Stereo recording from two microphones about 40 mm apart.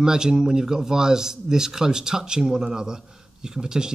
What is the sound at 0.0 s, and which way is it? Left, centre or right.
Speech, centre.